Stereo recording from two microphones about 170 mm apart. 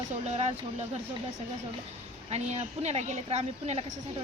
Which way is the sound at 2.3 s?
40° right (ahead or behind).